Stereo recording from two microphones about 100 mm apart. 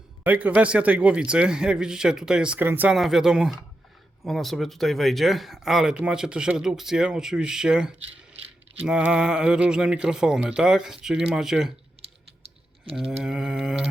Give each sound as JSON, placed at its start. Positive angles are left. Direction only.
{"t": 0.3, "sound": "speech", "side_deg": -15}
{"t": 2.9, "sound": "speech", "side_deg": -5}
{"t": 12.0, "sound": "typing", "side_deg": -75}
{"t": 13.2, "sound": "speech", "side_deg": -5}